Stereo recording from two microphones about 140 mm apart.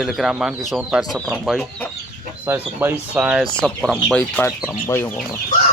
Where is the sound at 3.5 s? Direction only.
5° left (ahead or behind).